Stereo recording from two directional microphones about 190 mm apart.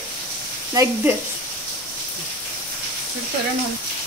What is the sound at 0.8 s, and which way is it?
Speech, 20° right (ahead or behind).